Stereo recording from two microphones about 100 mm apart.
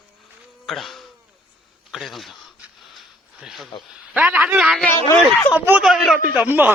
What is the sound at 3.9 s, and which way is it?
A man's voice, 10° right (ahead or behind).